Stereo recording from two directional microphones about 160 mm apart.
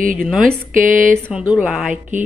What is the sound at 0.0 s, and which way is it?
Speech, 55° right (ahead or behind).